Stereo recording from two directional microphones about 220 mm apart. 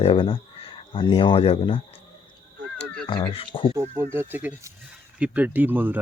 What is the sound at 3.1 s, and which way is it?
Speech, 25° left (ahead or behind).